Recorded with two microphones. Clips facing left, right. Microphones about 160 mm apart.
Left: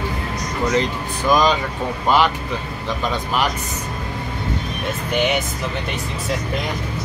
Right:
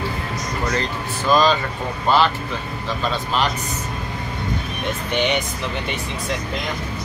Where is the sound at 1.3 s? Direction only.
15° left (ahead or behind).